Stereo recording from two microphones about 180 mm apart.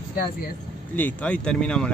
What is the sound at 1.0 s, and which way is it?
Speech, 10° left (ahead or behind).